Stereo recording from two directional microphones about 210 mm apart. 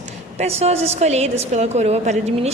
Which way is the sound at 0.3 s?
30° right (ahead or behind).